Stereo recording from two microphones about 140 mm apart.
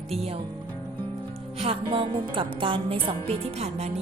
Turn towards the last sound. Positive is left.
turn(degrees=-50)  # may be behind; listen again after turning